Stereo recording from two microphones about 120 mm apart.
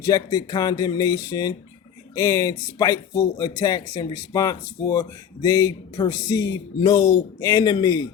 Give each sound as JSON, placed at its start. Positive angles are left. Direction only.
{"t": 0.0, "sound": "speech", "side_deg": 30}